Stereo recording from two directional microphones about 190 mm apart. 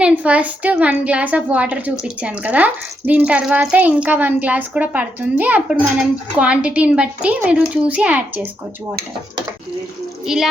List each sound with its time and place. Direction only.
0.0 s a child's voice: 5° right (ahead or behind)
10.2 s a child's voice: centre (ahead or behind)